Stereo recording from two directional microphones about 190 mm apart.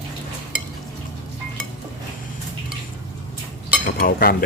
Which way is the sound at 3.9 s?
50° left (ahead or behind).